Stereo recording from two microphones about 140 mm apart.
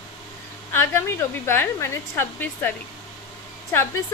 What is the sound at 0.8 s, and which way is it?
A woman's voice, 15° left (ahead or behind).